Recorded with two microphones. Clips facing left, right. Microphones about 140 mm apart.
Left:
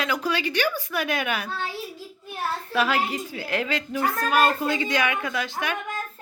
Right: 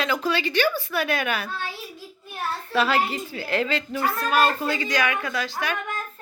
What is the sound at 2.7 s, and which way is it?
Speech, 10° left (ahead or behind).